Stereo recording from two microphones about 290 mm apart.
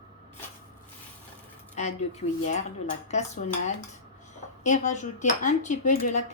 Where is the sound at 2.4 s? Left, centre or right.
Left.